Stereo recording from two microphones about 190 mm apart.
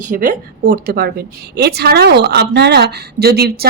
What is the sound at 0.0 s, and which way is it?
A woman's voice, 45° right (ahead or behind).